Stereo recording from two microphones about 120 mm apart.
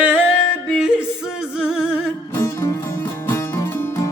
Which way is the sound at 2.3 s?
25° left (ahead or behind).